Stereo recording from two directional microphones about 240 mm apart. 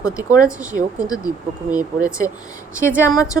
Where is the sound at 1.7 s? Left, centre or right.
Centre.